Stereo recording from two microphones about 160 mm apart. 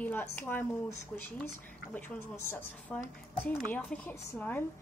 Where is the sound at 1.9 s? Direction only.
10° left (ahead or behind).